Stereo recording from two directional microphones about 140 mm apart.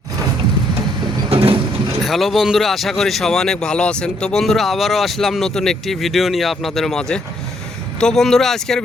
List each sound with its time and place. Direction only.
1.3 s vehicle: 40° right (ahead or behind)
2.0 s speech: centre (ahead or behind)